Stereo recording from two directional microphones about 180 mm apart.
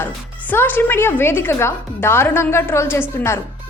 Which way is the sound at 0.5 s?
10° left (ahead or behind).